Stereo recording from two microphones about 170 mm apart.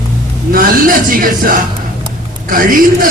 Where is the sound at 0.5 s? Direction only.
55° right (ahead or behind).